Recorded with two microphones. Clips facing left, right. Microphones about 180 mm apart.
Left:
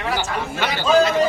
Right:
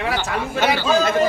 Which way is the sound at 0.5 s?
50° right (ahead or behind).